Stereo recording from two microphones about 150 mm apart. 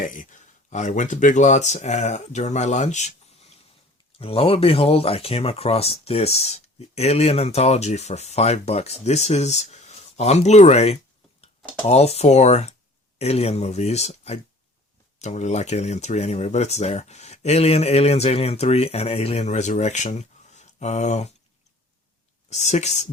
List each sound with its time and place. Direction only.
0.0 s speech: 60° left (ahead or behind)
4.2 s speech: 40° left (ahead or behind)
22.4 s speech: 50° left (ahead or behind)